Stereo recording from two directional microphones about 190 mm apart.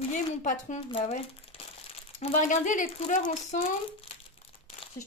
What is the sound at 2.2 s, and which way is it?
Speech, 40° left (ahead or behind).